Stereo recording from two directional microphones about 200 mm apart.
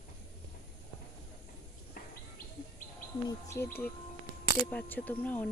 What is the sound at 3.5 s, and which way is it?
Speech, 10° left (ahead or behind).